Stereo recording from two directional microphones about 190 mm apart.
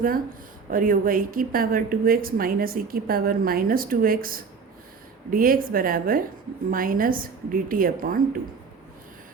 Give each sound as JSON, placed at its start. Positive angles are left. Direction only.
{"t": 0.7, "sound": "a woman's voice", "side_deg": -45}